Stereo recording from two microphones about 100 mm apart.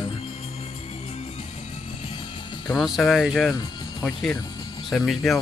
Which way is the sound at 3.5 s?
40° left (ahead or behind).